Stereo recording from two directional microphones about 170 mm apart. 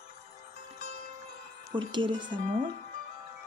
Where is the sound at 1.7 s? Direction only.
30° right (ahead or behind).